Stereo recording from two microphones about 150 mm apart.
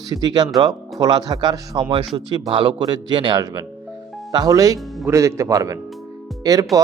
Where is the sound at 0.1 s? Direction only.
30° right (ahead or behind).